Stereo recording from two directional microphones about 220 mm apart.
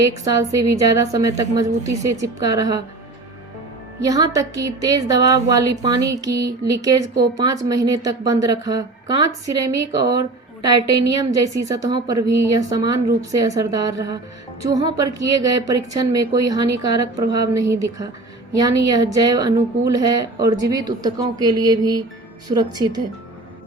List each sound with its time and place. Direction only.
0.0 s a woman's voice: 15° right (ahead or behind)
4.0 s a woman's voice: 15° right (ahead or behind)